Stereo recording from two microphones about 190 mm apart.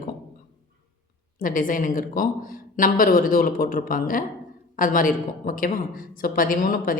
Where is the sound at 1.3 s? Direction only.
45° left (ahead or behind).